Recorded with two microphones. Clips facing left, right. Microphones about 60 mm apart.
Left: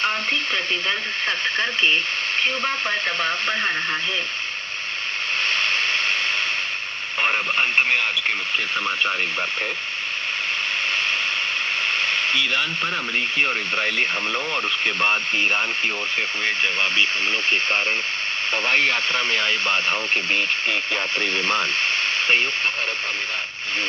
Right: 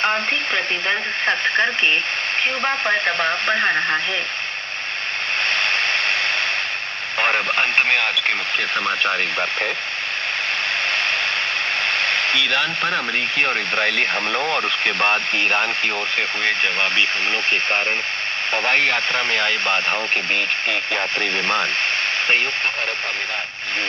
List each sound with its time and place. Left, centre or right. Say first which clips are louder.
0.0 s speech: right 3 dB; right
5.5 s a sound: right 2 dB; right
7.2 s speech: right 2 dB; right
11.9 s speech: right 2 dB; right
17.5 s speech: right 1 dB; right